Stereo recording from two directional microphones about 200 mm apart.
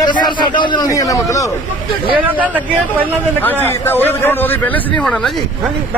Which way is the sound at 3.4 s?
10° left (ahead or behind).